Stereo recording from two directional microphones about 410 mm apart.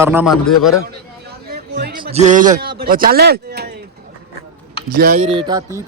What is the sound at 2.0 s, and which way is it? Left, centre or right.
Speech, centre.